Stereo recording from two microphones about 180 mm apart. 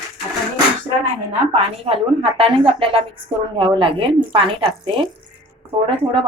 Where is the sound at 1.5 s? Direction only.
35° right (ahead or behind).